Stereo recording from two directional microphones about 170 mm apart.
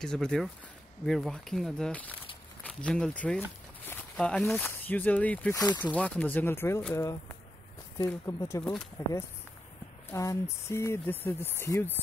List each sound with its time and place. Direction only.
0.0 s speech: 5° left (ahead or behind)